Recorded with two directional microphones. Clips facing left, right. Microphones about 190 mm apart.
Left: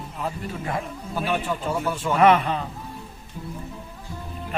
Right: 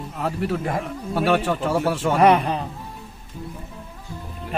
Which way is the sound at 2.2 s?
35° right (ahead or behind).